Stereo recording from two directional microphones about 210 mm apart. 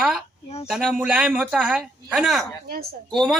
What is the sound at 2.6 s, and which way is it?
Speech, 45° right (ahead or behind).